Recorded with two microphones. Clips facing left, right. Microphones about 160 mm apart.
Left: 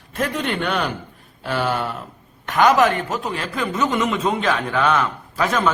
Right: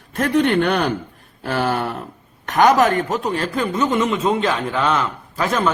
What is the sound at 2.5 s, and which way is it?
A man's voice, 40° right (ahead or behind).